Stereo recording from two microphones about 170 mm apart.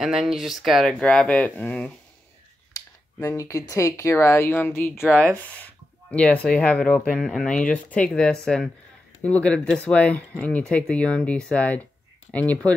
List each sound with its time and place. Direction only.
0.0 s speech: 5° right (ahead or behind)
2.7 s speech: 20° left (ahead or behind)
6.1 s speech: 5° left (ahead or behind)